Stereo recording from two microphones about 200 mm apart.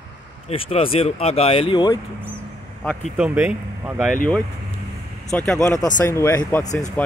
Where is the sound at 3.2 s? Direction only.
5° right (ahead or behind).